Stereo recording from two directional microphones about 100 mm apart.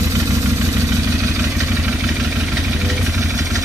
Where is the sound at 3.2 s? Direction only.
35° right (ahead or behind).